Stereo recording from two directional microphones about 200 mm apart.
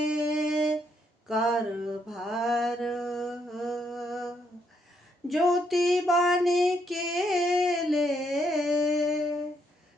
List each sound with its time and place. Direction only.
0.0 s music: 5° right (ahead or behind)
1.3 s mantra: centre (ahead or behind)
5.3 s female singing: centre (ahead or behind)